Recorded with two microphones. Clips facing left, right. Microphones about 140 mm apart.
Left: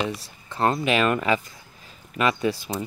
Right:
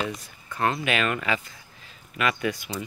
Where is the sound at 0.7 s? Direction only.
40° left (ahead or behind).